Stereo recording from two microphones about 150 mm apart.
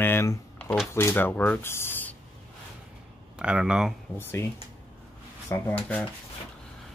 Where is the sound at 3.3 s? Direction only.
5° right (ahead or behind).